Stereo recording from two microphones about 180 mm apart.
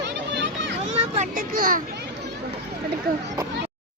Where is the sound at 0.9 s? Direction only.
35° right (ahead or behind).